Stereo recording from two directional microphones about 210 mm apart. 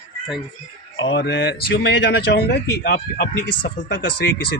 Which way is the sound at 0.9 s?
60° left (ahead or behind).